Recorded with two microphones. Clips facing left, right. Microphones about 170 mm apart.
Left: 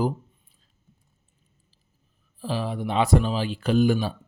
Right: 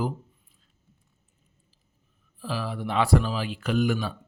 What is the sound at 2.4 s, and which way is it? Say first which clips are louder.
Speech: left 3 dB; 25° left (ahead or behind).